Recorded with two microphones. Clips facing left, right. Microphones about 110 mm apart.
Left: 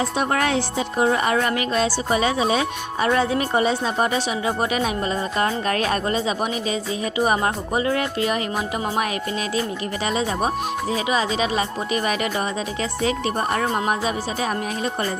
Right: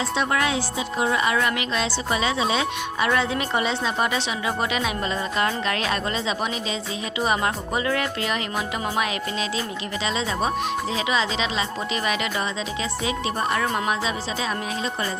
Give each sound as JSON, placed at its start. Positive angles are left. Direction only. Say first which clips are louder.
{"t": 0.0, "sound": "speech", "louder": "left 2 dB", "side_deg": 45}
{"t": 0.9, "sound": "speech", "louder": "left 3 dB", "side_deg": 40}
{"t": 11.1, "sound": "speech", "louder": "left 3 dB", "side_deg": 45}
{"t": 13.5, "sound": "speech", "louder": "left 1 dB", "side_deg": 35}